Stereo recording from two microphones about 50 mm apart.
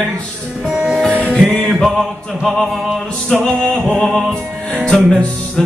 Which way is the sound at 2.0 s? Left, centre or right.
Centre.